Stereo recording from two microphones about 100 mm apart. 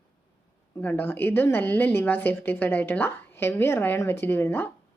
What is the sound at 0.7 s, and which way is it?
A woman's voice, 20° left (ahead or behind).